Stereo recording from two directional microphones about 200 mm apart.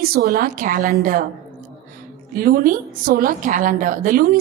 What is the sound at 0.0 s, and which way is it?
A woman's voice, 50° right (ahead or behind).